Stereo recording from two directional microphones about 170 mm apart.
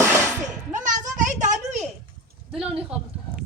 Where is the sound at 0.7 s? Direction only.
50° right (ahead or behind).